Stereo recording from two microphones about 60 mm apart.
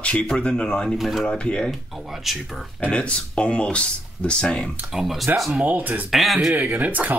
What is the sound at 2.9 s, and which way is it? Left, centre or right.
Speech, centre.